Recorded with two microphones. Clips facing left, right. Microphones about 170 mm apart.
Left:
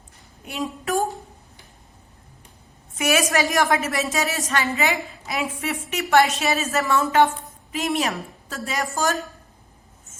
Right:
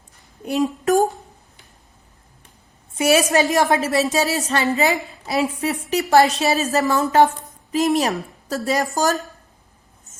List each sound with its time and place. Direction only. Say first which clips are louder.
0.4 s a woman's voice: right 8 dB; 40° right (ahead or behind)
3.0 s a woman's voice: right 5 dB; 35° right (ahead or behind)